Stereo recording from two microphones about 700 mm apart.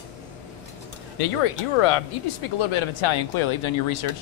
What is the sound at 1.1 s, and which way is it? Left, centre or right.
Speech, left.